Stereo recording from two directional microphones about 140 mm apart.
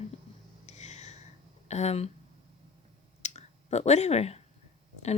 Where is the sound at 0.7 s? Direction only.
55° left (ahead or behind).